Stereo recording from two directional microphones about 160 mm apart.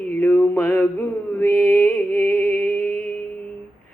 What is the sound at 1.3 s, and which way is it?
Mantra, 10° left (ahead or behind).